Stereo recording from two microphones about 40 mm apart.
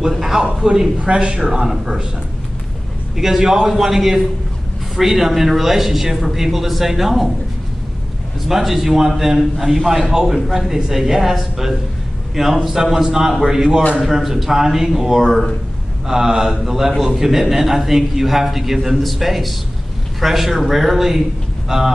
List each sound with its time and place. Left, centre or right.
0.2 s a man's voice: centre
0.9 s speech: right
1.5 s a man's voice: centre
3.2 s a man's voice: centre
8.5 s a man's voice: centre